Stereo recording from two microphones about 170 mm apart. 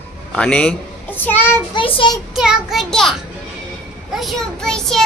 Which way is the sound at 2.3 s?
5° right (ahead or behind).